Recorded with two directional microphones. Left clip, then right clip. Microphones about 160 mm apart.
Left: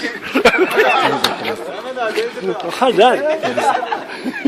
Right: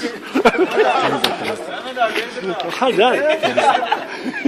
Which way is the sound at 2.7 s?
20° left (ahead or behind).